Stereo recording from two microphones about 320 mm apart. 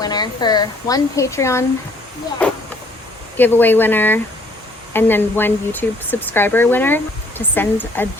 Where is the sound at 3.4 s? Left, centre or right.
Centre.